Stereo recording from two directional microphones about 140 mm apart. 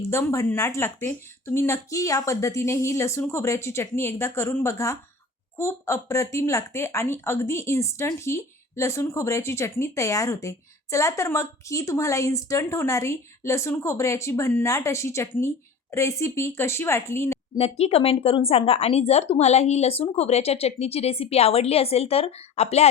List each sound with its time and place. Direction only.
0.1 s a woman's voice: 20° left (ahead or behind)
17.6 s speech: 45° left (ahead or behind)